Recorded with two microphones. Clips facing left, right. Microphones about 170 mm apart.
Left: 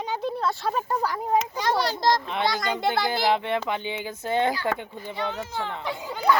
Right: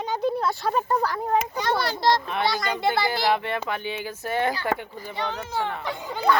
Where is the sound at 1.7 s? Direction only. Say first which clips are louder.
Even; 40° left (ahead or behind).